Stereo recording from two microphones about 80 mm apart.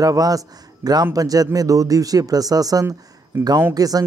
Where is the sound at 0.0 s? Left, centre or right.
Right.